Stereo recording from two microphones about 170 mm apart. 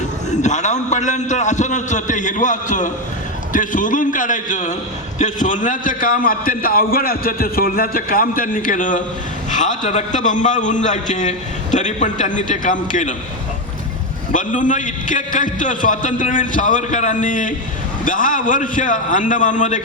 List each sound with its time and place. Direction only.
0.4 s a man's voice: 45° left (ahead or behind)
14.3 s a man's voice: 50° left (ahead or behind)